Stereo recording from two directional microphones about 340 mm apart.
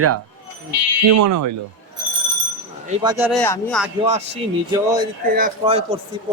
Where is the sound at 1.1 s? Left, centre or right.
Right.